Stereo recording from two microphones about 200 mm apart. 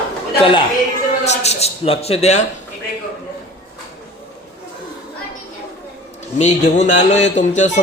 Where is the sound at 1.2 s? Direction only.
35° left (ahead or behind).